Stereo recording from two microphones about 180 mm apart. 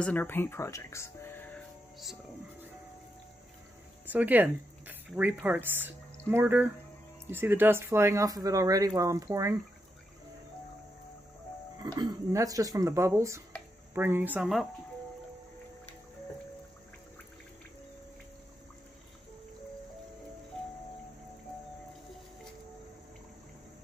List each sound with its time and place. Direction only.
0.0 s speech: 10° left (ahead or behind)
4.1 s speech: 10° right (ahead or behind)
11.8 s speech: 20° right (ahead or behind); by 14.7 s centre (ahead or behind)